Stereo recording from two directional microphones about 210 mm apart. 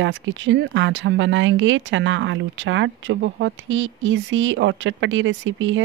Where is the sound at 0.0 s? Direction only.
65° right (ahead or behind).